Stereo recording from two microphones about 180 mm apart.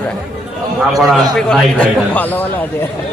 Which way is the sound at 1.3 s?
Centre (ahead or behind).